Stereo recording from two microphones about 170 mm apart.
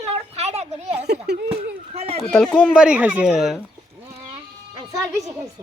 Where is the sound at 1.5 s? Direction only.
35° right (ahead or behind).